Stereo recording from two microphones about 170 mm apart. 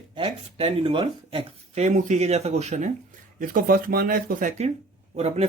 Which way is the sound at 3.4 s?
55° right (ahead or behind).